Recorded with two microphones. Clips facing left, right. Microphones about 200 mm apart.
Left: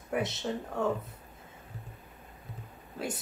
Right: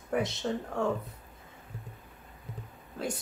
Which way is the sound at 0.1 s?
5° left (ahead or behind).